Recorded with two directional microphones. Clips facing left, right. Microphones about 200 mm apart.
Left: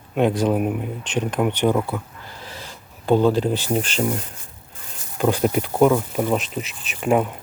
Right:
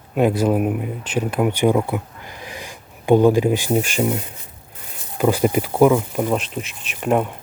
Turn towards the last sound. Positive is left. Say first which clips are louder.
# even
turn(degrees=0)  # may be behind; listen again after turning